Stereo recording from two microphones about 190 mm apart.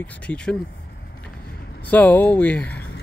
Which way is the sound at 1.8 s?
10° left (ahead or behind).